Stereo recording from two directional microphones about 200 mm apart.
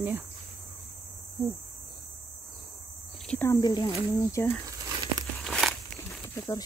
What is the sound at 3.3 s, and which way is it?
Speech, 10° left (ahead or behind).